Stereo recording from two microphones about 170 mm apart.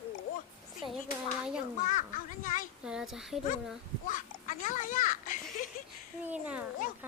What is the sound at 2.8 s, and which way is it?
Speech, 5° right (ahead or behind).